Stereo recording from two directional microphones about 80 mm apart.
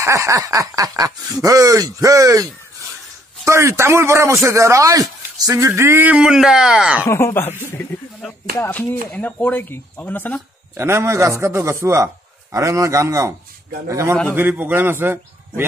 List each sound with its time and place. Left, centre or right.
0.0 s speech: right
5.8 s speech: right
6.0 s speech: centre
7.1 s speech: left
10.8 s speech: right
14.3 s a man's voice: right